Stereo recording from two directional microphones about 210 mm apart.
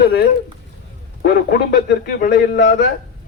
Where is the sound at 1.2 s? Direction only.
45° left (ahead or behind).